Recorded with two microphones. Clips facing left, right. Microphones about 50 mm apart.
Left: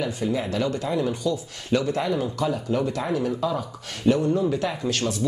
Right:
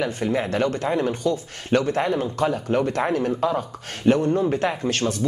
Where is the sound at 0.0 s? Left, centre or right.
Right.